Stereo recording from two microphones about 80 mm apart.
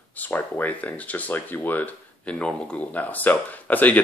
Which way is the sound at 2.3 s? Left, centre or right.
Centre.